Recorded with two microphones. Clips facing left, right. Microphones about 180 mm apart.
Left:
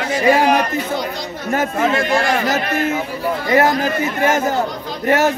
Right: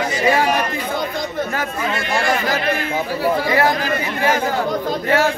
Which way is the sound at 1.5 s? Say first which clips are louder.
Left 6 dB; 45° left (ahead or behind).